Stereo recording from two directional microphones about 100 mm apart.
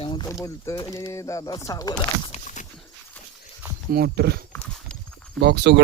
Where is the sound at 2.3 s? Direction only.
90° left.